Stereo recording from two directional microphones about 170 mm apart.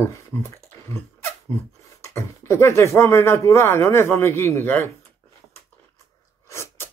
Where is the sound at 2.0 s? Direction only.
15° left (ahead or behind).